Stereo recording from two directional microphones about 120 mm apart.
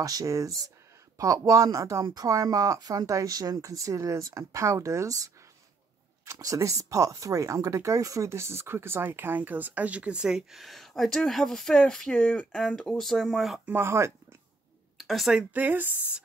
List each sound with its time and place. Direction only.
0.0 s speech: 30° right (ahead or behind); by 13.6 s centre (ahead or behind)
13.7 s speech: 20° right (ahead or behind)
15.0 s speech: centre (ahead or behind)
15.5 s speech: 15° right (ahead or behind)